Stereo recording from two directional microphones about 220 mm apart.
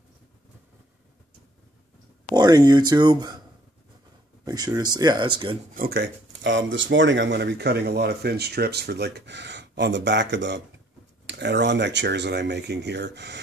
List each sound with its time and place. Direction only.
2.3 s speech: 20° right (ahead or behind)
4.5 s speech: 15° right (ahead or behind)
5.8 s speech: 45° right (ahead or behind)